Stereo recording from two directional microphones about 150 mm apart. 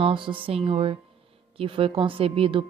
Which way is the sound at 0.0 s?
35° right (ahead or behind).